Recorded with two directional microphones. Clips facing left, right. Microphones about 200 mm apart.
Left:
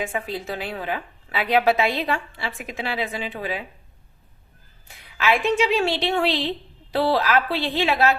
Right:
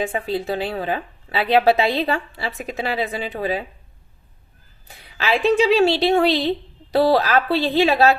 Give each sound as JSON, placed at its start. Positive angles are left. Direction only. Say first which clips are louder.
{"t": 0.0, "sound": "a woman's voice", "louder": "right 5 dB", "side_deg": -30}
{"t": 4.9, "sound": "a woman's voice", "louder": "even", "side_deg": -35}